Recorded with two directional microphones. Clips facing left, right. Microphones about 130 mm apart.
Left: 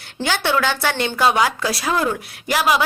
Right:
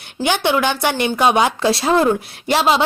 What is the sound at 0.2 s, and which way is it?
Speech, 15° right (ahead or behind).